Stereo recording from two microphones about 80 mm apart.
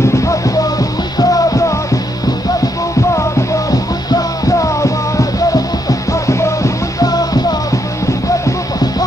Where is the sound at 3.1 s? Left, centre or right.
Left.